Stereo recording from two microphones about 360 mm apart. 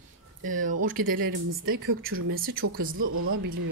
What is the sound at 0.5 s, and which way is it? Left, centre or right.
Speech, right.